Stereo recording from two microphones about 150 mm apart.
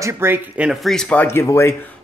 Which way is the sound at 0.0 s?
15° right (ahead or behind).